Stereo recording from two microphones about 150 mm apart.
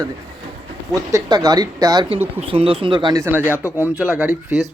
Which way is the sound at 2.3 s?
40° right (ahead or behind).